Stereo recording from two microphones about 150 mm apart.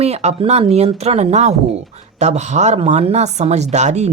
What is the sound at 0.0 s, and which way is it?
Speech, 45° right (ahead or behind).